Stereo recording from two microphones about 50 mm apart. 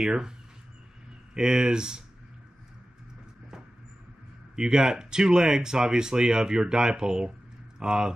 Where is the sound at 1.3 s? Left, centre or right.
Centre.